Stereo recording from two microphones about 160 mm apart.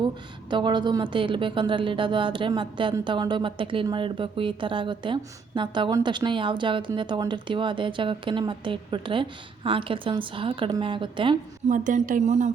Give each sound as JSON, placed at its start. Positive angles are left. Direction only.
{"t": 0.5, "sound": "a woman's voice", "side_deg": -30}
{"t": 11.7, "sound": "speech", "side_deg": -55}